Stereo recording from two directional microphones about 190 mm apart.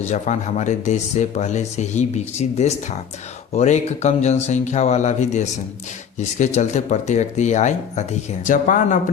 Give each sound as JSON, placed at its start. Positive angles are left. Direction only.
{"t": 0.0, "sound": "speech", "side_deg": 40}